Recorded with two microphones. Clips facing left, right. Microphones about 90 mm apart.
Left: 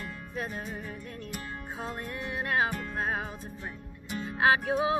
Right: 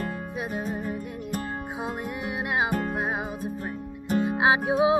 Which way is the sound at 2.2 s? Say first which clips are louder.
Right 1 dB; 15° right (ahead or behind).